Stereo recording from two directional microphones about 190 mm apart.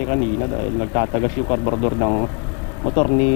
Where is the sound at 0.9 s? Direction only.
25° left (ahead or behind).